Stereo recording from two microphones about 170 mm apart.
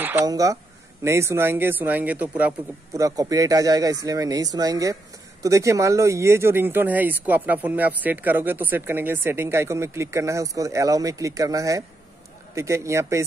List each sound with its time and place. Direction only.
0.0 s speech: 15° right (ahead or behind)